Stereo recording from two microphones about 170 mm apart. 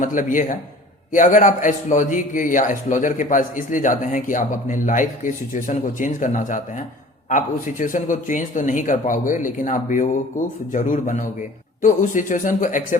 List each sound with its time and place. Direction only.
0.0 s a man's voice: 50° left (ahead or behind)